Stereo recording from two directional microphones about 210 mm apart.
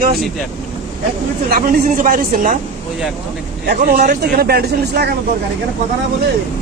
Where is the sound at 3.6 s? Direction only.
40° right (ahead or behind).